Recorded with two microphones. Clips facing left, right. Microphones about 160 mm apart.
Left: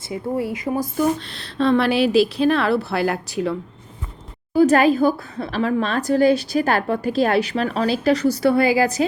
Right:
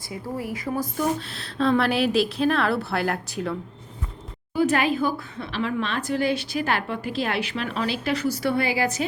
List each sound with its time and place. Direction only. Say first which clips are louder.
0.1 s speech: left 7 dB; 25° left (ahead or behind)
1.3 s a woman's voice: left 4 dB; centre (ahead or behind)
4.5 s a woman's voice: left 7 dB; 40° left (ahead or behind)